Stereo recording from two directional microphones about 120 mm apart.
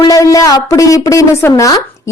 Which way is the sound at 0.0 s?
30° left (ahead or behind).